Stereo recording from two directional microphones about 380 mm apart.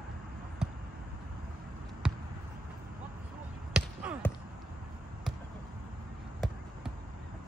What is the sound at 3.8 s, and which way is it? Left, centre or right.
Basketball bounce, centre.